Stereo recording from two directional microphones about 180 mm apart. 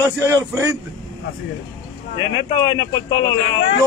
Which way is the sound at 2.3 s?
20° left (ahead or behind).